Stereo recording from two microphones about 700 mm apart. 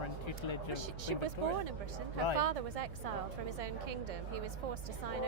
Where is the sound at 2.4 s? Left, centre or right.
Right.